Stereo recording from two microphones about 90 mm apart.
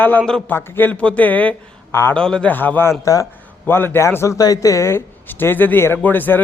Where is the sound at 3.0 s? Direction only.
40° left (ahead or behind).